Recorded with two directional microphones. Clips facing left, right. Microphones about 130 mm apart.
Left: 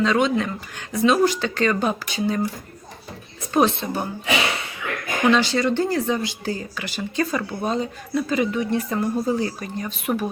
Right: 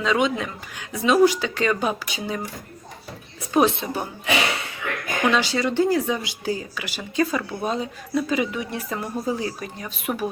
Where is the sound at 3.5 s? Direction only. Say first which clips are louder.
Even; 10° right (ahead or behind).